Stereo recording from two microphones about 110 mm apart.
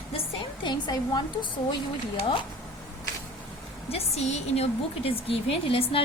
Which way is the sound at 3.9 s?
70° left (ahead or behind).